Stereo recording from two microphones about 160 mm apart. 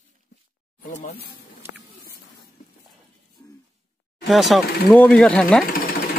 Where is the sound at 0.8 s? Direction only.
50° left (ahead or behind).